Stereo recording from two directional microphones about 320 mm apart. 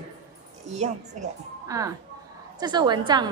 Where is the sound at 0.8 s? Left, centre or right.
Right.